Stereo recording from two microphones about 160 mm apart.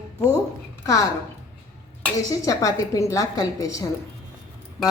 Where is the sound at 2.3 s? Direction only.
20° left (ahead or behind).